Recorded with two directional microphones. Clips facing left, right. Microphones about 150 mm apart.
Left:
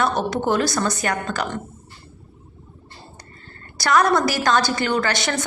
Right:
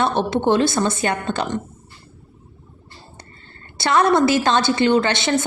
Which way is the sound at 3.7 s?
25° right (ahead or behind).